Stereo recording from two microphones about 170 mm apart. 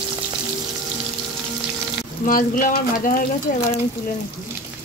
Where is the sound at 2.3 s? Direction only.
55° left (ahead or behind).